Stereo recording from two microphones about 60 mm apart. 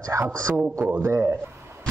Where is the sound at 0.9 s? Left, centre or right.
Right.